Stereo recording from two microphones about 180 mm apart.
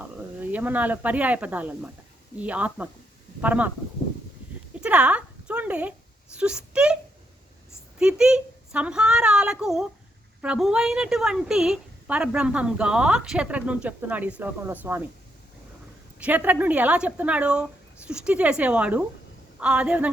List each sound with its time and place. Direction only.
0.3 s speech: 10° right (ahead or behind)
4.8 s a sound: 5° right (ahead or behind)
6.3 s a woman's voice: 5° right (ahead or behind)
7.9 s a woman's voice: 5° right (ahead or behind)
16.1 s speech: 10° right (ahead or behind)